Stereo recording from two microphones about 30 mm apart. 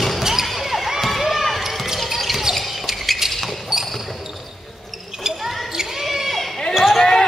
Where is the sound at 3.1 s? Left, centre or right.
Centre.